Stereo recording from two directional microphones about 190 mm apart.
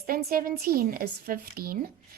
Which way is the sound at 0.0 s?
55° right (ahead or behind).